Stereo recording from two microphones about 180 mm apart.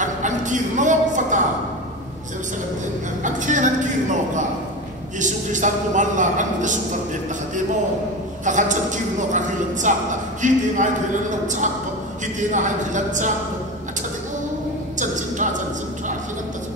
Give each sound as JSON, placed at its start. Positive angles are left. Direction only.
{"t": 0.0, "sound": "a sound", "side_deg": -45}
{"t": 3.2, "sound": "music", "side_deg": -45}
{"t": 5.2, "sound": "a man's voice", "side_deg": -45}
{"t": 8.5, "sound": "a man's voice", "side_deg": -45}
{"t": 15.0, "sound": "speech", "side_deg": -45}